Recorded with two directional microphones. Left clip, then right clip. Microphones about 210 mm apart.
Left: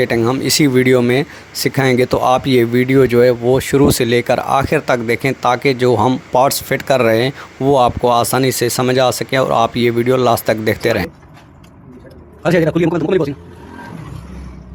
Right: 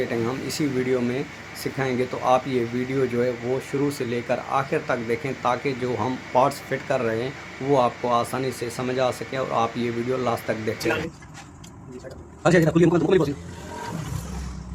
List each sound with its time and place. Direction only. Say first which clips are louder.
0.0 s speech: left 11 dB; 50° left (ahead or behind)
12.4 s a man's voice: left 5 dB; 40° left (ahead or behind)